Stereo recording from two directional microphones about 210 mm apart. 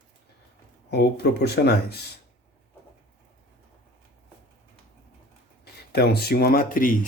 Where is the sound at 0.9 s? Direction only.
50° left (ahead or behind).